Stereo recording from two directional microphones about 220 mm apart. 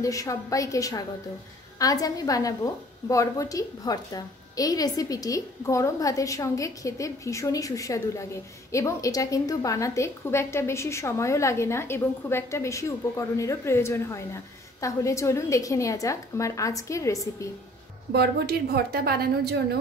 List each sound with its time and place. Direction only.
0.0 s a woman's voice: 15° left (ahead or behind)
18.1 s a woman's voice: 45° right (ahead or behind)